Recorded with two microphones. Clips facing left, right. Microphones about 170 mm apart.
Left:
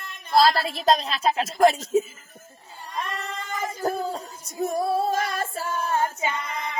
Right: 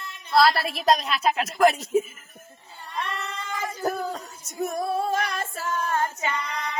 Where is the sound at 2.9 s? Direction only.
45° left (ahead or behind).